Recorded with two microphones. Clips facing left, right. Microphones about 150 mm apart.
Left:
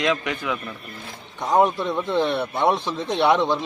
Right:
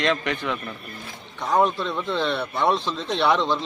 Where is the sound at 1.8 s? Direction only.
15° left (ahead or behind).